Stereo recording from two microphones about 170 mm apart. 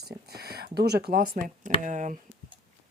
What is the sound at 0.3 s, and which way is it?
Speech, 65° right (ahead or behind).